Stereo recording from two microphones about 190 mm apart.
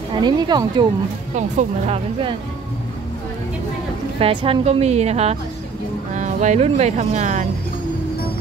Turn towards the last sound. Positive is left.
turn(degrees=-40)  # may be behind; listen again after turning